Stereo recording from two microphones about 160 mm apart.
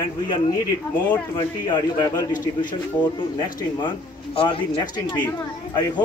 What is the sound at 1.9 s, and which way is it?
Speech, 25° left (ahead or behind).